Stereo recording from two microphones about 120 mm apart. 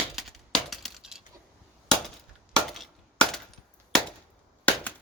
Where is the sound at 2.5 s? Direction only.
5° left (ahead or behind).